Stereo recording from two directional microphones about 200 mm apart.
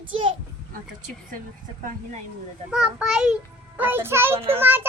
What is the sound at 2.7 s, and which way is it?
A child's voice, 5° right (ahead or behind).